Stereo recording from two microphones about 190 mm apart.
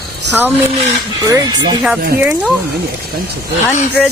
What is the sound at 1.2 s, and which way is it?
Speech, 20° right (ahead or behind).